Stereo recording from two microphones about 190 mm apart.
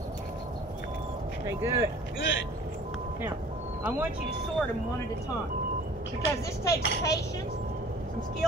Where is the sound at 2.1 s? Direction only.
80° left.